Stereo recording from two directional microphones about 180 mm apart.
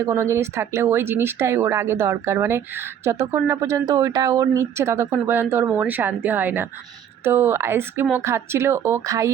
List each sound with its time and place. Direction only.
0.0 s speech: 15° right (ahead or behind)